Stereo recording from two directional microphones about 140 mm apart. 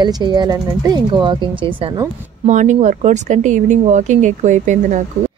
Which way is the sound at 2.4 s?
60° right (ahead or behind).